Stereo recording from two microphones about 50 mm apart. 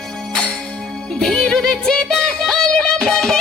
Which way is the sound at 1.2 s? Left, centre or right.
Centre.